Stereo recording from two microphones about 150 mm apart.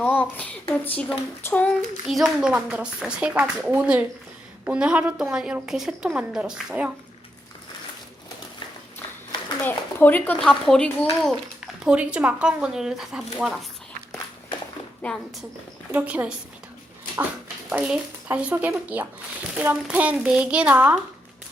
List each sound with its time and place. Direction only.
0.0 s speech: 10° left (ahead or behind)
1.5 s child singing: 10° left (ahead or behind)
2.0 s a woman's voice: 5° right (ahead or behind)
9.6 s speech: 10° left (ahead or behind)
15.0 s speech: 5° left (ahead or behind)
15.9 s a woman's voice: 10° right (ahead or behind)
17.7 s a woman's voice: 5° right (ahead or behind)